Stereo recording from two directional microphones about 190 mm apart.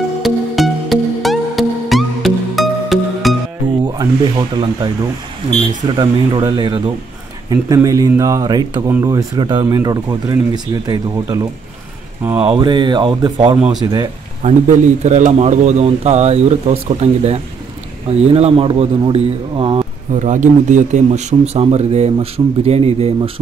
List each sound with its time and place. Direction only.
0.2 s music: centre (ahead or behind)
3.8 s snake: 20° right (ahead or behind)
5.9 s speech: 25° right (ahead or behind)
14.4 s speech: 40° right (ahead or behind)
20.2 s speech: 40° right (ahead or behind)